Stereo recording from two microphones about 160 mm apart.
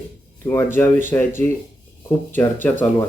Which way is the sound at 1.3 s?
15° left (ahead or behind).